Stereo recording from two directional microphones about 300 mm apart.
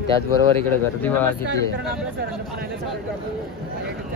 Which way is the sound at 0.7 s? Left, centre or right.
Centre.